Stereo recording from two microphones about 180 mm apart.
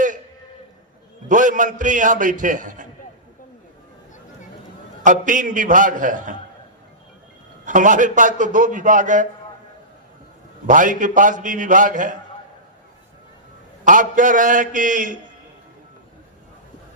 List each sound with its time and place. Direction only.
1.3 s a man's voice: 45° right (ahead or behind)
5.0 s a man's voice: 45° right (ahead or behind)
7.6 s a man's voice: 45° right (ahead or behind)
10.7 s a man's voice: 45° right (ahead or behind)
13.8 s a man's voice: 45° right (ahead or behind)